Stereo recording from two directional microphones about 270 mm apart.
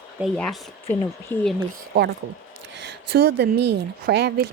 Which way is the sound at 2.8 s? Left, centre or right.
Right.